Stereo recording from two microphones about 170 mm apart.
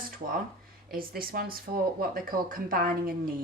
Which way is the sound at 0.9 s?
60° right (ahead or behind).